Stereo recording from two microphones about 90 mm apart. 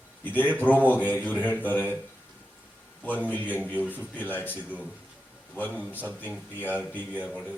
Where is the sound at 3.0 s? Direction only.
20° left (ahead or behind).